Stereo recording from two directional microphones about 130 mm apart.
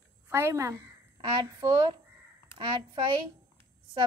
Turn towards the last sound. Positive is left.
turn(degrees=-40)  # may be behind; listen again after turning